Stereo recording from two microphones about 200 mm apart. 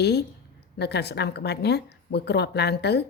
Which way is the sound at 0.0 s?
55° left (ahead or behind).